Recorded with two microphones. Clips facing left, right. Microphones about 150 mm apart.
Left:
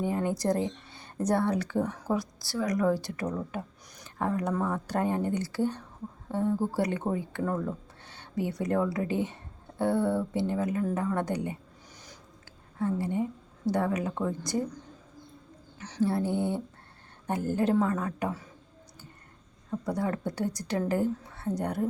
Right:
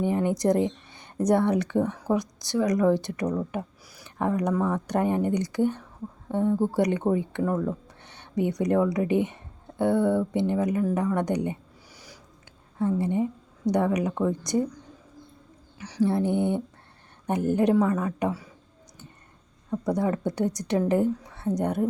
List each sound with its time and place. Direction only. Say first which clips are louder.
0.0 s a woman's voice: right 5 dB; 20° right (ahead or behind)
12.8 s a woman's voice: right 4 dB; 20° right (ahead or behind)
15.8 s a woman's voice: right 4 dB; 10° right (ahead or behind)
19.7 s a woman's voice: right 5 dB; 20° right (ahead or behind)